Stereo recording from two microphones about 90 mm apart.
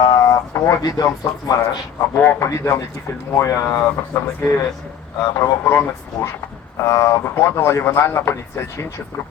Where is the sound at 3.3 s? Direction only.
35° left (ahead or behind).